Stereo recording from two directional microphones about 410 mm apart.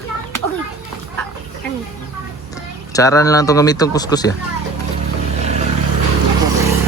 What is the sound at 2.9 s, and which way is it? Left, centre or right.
Speech, centre.